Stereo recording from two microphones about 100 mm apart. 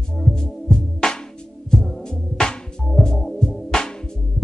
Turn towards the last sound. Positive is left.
turn(degrees=5)  # may be behind; listen again after turning